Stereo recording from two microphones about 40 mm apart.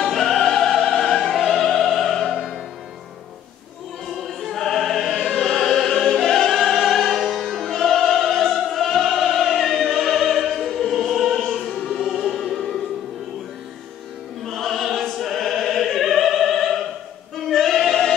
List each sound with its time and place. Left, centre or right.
0.1 s music: centre
4.2 s music: centre
4.5 s opera: centre
5.1 s opera: left
5.4 s music: centre
7.2 s music: centre
9.8 s opera: centre
11.9 s music: centre
12.3 s music: centre
14.4 s opera: centre
17.5 s singing: centre